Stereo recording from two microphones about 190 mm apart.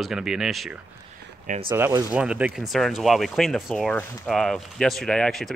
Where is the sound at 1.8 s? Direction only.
15° right (ahead or behind).